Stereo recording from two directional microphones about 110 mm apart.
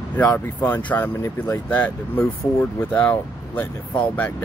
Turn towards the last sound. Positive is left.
turn(degrees=15)  # may be behind; listen again after turning